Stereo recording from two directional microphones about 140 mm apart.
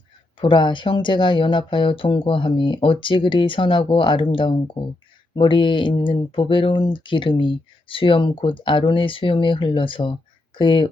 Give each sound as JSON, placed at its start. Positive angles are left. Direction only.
{"t": 0.3, "sound": "speech", "side_deg": 35}